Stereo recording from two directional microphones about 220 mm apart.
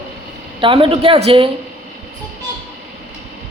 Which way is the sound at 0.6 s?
25° right (ahead or behind).